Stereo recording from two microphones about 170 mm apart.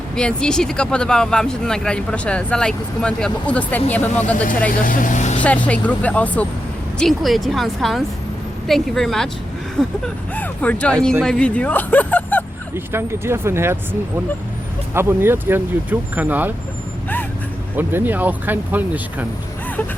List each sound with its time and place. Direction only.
0.2 s speech: 5° left (ahead or behind)
4.7 s speech: 55° left (ahead or behind)
5.4 s speech: 10° left (ahead or behind)
10.3 s speech: 10° left (ahead or behind)
12.7 s speech: 15° right (ahead or behind)
14.9 s speech: 15° right (ahead or behind)
17.7 s speech: 10° right (ahead or behind)